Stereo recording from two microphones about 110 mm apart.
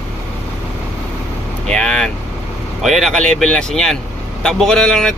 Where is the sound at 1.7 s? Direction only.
10° left (ahead or behind).